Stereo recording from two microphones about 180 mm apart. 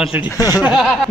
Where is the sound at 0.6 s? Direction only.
Centre (ahead or behind).